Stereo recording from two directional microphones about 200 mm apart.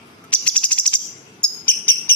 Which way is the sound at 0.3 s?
5° left (ahead or behind).